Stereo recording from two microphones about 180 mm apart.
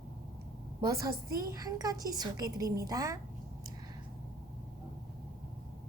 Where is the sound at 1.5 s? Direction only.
20° right (ahead or behind).